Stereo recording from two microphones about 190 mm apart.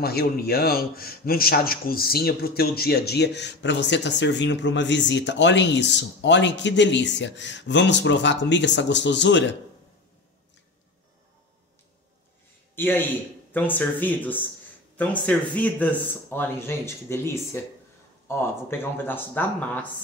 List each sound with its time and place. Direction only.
0.0 s a man's voice: 55° left (ahead or behind)
12.7 s speech: 10° left (ahead or behind)